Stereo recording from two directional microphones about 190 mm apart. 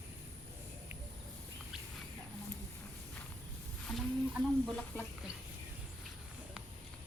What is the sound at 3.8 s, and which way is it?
Chicken, centre (ahead or behind).